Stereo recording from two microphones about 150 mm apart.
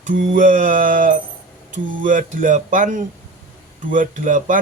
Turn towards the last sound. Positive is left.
turn(degrees=-60)  # may be behind; listen again after turning